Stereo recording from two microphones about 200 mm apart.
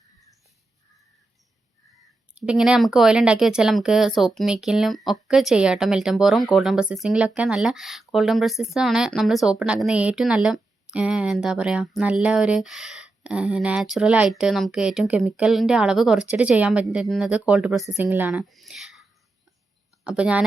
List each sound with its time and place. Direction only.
2.3 s a woman's voice: 5° right (ahead or behind)
20.1 s speech: 5° right (ahead or behind)